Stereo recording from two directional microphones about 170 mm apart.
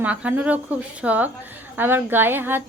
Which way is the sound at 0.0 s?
10° right (ahead or behind).